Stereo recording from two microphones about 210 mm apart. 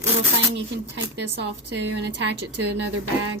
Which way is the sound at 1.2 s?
55° right (ahead or behind).